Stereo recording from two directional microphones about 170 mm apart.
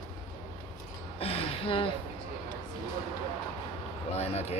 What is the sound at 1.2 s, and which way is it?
Speech, 35° left (ahead or behind).